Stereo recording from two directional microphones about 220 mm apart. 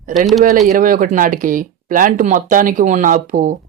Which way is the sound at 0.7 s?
40° right (ahead or behind).